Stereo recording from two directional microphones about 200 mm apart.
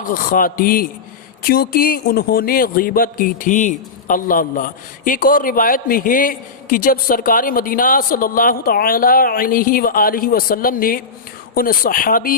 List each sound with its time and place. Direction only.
0.0 s speech: 45° left (ahead or behind)